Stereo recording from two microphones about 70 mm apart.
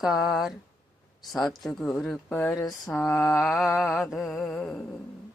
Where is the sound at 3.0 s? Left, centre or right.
Left.